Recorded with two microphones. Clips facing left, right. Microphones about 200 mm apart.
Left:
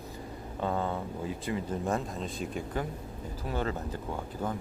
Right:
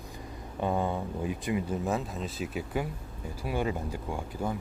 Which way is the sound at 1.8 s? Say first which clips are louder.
Even; 5° right (ahead or behind).